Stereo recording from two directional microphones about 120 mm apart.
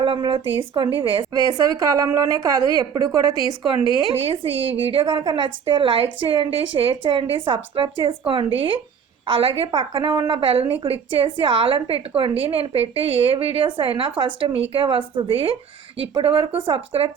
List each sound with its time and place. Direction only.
0.0 s a woman's voice: 40° right (ahead or behind)
1.3 s a woman's voice: 30° right (ahead or behind)
4.1 s a woman's voice: 50° right (ahead or behind)